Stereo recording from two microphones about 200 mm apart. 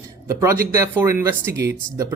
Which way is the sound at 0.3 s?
15° right (ahead or behind).